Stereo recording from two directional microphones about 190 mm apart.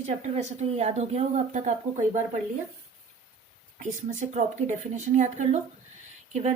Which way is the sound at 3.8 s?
40° right (ahead or behind).